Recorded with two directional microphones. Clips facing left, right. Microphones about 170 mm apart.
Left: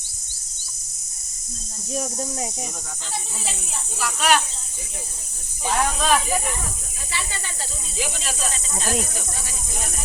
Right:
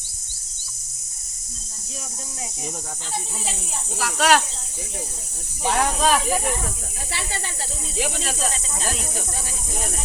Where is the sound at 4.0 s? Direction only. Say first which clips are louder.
Right 2 dB; 90° right.